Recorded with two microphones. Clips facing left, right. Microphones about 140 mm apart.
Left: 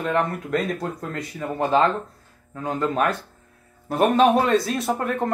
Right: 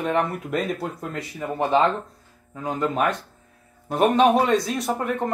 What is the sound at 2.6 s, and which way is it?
Speech, 5° right (ahead or behind).